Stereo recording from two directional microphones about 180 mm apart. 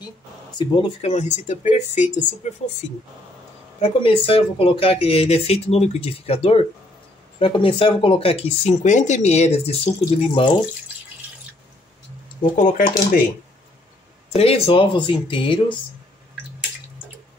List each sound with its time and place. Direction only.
0.6 s speech: 25° left (ahead or behind); by 2.7 s 40° left (ahead or behind)
3.8 s speech: 30° left (ahead or behind)
12.5 s speech: 45° left (ahead or behind)
14.3 s speech: 35° left (ahead or behind)